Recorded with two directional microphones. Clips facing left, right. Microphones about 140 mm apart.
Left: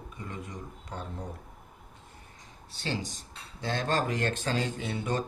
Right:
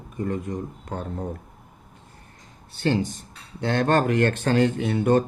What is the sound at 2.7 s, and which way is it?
Speech, 55° right (ahead or behind).